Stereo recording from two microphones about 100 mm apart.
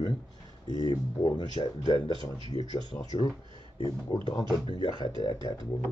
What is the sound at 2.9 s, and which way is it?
Speech, 25° left (ahead or behind).